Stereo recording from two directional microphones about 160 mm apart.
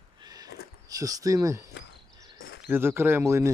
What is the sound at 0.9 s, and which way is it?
Speech, 20° right (ahead or behind).